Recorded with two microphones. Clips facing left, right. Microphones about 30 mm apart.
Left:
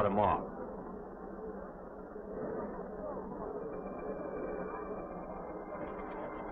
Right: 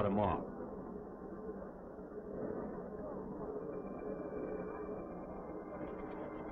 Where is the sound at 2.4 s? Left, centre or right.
Centre.